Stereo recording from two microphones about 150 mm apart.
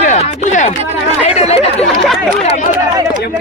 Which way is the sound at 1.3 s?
40° left (ahead or behind).